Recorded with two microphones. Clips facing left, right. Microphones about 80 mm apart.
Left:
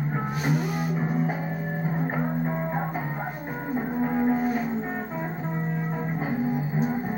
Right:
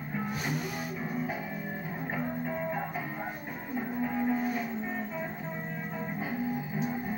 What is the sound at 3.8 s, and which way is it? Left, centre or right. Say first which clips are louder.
Cattle: left 6 dB; left.